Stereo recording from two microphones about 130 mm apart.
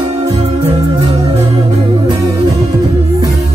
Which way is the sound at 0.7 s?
25° right (ahead or behind).